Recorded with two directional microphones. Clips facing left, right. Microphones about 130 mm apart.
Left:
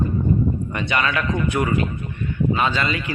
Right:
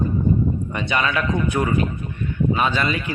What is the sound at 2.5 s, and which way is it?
Speech, 15° right (ahead or behind).